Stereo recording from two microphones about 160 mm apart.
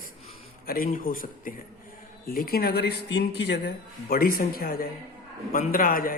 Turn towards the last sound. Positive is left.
turn(degrees=60)  # may be behind; listen again after turning